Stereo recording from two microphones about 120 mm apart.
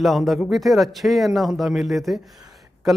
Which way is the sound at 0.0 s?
Centre (ahead or behind).